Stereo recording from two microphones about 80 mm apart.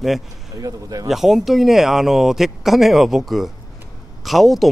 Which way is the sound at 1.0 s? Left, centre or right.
Centre.